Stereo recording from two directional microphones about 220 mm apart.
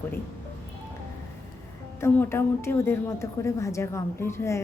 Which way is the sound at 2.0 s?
10° left (ahead or behind).